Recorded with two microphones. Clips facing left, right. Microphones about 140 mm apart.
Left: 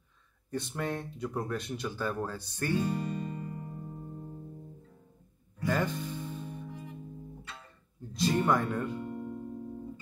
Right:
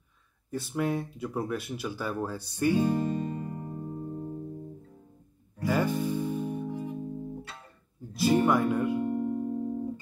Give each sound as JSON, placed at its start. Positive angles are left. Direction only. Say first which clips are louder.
{"t": 0.5, "sound": "speech", "louder": "right 4 dB", "side_deg": -5}
{"t": 2.8, "sound": "music", "louder": "right 6 dB", "side_deg": -35}
{"t": 5.7, "sound": "music", "louder": "right 4 dB", "side_deg": -10}
{"t": 6.7, "sound": "music", "louder": "right 9 dB", "side_deg": -35}
{"t": 8.1, "sound": "speech", "louder": "right 4 dB", "side_deg": -5}
{"t": 9.1, "sound": "music", "louder": "right 9 dB", "side_deg": -45}